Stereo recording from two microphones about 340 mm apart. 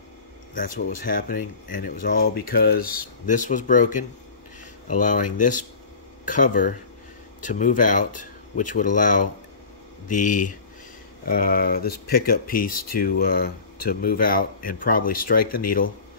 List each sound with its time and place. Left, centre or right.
0.6 s speech: left